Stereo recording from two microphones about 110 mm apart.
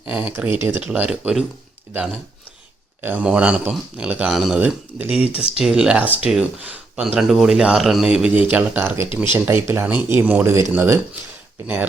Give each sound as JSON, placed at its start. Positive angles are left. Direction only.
{"t": 0.1, "sound": "speech", "side_deg": -15}
{"t": 3.0, "sound": "speech", "side_deg": -15}